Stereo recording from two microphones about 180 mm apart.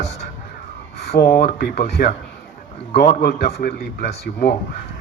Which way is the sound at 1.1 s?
60° left (ahead or behind).